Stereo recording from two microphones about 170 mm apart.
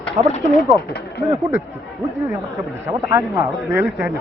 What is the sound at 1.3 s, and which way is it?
Speech, 20° right (ahead or behind).